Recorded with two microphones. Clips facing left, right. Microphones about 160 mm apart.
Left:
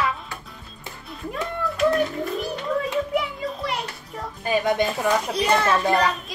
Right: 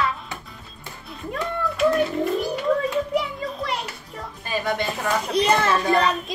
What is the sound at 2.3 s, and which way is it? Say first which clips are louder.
Children playing: right 2 dB; centre (ahead or behind).